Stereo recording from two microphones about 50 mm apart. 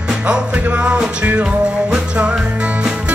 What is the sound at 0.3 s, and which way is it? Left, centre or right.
Music, right.